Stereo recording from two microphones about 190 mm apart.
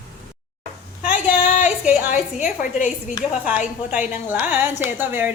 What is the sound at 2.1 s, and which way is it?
Speech, 40° left (ahead or behind).